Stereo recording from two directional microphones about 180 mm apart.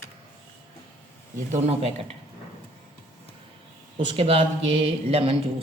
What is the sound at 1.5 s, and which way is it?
Speech, 35° right (ahead or behind).